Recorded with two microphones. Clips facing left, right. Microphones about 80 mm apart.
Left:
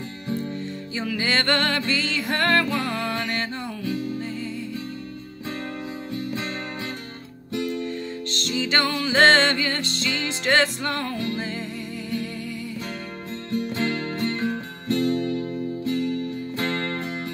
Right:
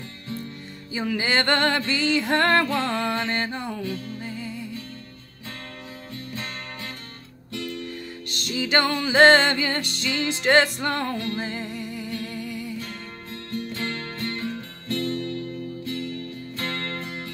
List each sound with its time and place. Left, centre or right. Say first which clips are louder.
0.9 s music: right 1 dB; right
3.8 s music: left 4 dB; centre
4.2 s music: left 3 dB; centre
7.5 s music: left 6 dB; left
8.3 s music: right 1 dB; centre
13.5 s music: left 5 dB; centre